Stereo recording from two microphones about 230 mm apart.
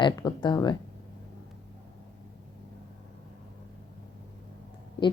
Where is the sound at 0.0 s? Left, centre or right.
Centre.